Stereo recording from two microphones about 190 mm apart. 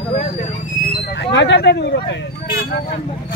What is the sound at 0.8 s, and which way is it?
Speech, 65° left (ahead or behind).